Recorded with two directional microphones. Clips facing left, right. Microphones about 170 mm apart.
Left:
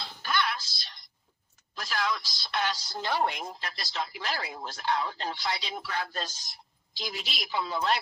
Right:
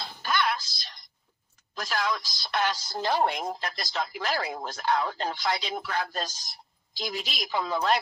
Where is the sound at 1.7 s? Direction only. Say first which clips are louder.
Right 2 dB; 45° right (ahead or behind).